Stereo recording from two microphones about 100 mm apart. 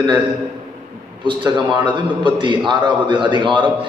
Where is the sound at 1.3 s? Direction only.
50° right (ahead or behind).